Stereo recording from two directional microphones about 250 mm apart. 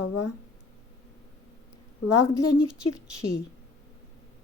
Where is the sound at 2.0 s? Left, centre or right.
Left.